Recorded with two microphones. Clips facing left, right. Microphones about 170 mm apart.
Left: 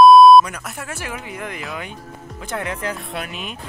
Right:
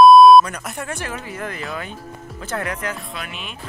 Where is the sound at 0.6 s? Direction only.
Centre (ahead or behind); by 2.8 s 15° left (ahead or behind).